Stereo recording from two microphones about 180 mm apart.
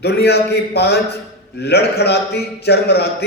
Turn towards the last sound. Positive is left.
turn(degrees=65)  # may be behind; listen again after turning